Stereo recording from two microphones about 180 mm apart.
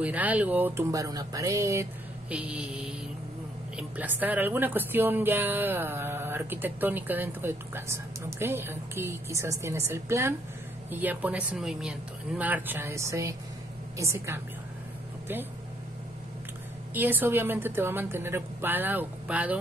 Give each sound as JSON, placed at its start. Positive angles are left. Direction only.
{"t": 0.0, "sound": "a woman's voice", "side_deg": -10}
{"t": 16.9, "sound": "a woman's voice", "side_deg": -10}